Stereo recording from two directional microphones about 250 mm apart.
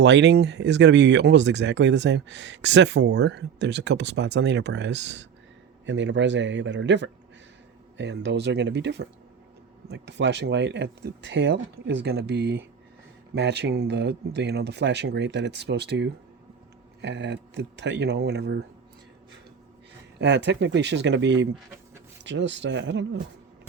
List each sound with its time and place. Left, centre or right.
0.0 s speech: right
20.1 s speech: right